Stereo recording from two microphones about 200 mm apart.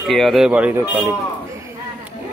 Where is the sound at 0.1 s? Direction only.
Centre (ahead or behind).